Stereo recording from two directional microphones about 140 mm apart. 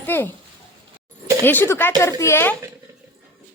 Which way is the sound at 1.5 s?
15° left (ahead or behind).